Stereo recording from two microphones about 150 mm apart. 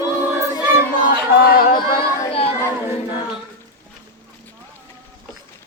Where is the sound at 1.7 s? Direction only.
30° left (ahead or behind).